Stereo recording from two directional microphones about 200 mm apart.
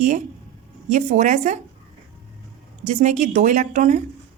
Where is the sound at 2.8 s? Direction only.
35° right (ahead or behind).